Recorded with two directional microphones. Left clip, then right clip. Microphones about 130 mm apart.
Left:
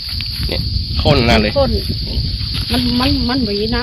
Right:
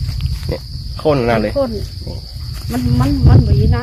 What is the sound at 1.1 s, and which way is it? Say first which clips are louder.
Speech: left 1 dB; 55° right (ahead or behind).